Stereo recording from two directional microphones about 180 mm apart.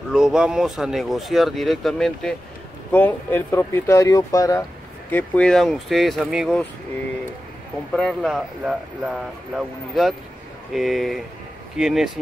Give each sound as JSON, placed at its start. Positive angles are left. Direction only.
{"t": 0.1, "sound": "speech", "side_deg": -5}
{"t": 5.1, "sound": "speech", "side_deg": 5}
{"t": 7.9, "sound": "speech", "side_deg": 0}